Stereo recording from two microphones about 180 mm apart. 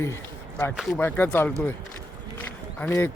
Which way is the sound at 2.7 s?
10° left (ahead or behind).